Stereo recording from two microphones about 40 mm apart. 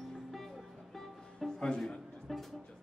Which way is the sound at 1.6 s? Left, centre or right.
Centre.